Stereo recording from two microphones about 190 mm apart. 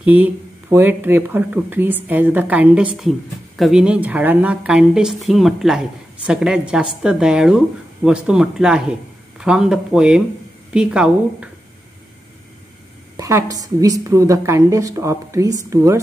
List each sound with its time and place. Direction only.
0.0 s a woman's voice: 10° right (ahead or behind)
13.2 s speech: 15° right (ahead or behind)